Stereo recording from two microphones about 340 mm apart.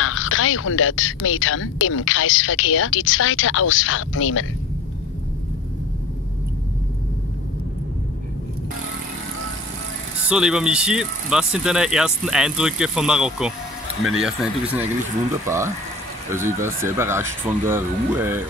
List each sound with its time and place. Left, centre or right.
0.0 s speech: left
10.3 s speech: centre